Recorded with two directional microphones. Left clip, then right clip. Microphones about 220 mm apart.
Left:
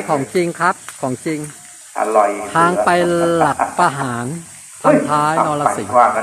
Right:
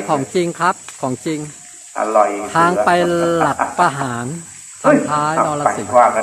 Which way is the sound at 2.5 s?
Centre (ahead or behind).